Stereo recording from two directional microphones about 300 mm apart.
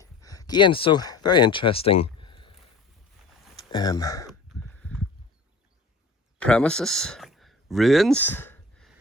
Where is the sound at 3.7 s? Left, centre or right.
Centre.